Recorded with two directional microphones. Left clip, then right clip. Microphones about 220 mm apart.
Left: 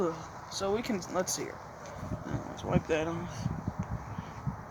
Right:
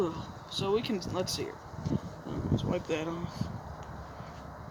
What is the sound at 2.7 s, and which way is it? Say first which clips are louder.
Speech: left 5 dB; 20° left (ahead or behind).